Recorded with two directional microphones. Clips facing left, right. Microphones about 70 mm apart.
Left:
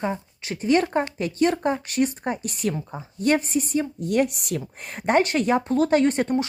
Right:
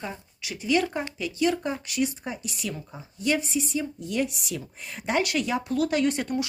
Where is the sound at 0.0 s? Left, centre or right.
Left.